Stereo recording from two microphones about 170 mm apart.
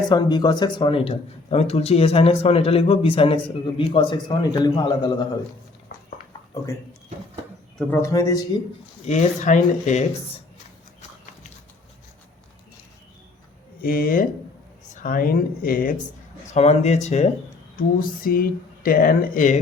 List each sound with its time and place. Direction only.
0.1 s speech: 25° left (ahead or behind)
7.8 s speech: 10° left (ahead or behind)
9.0 s speech: 45° left (ahead or behind)
13.8 s speech: 60° left (ahead or behind)
16.6 s speech: 40° left (ahead or behind)
17.7 s speech: 60° left (ahead or behind)